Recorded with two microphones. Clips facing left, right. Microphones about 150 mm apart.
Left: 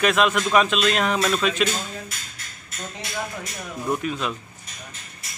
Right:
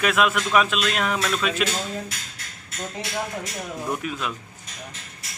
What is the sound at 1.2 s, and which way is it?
Speech, 10° left (ahead or behind).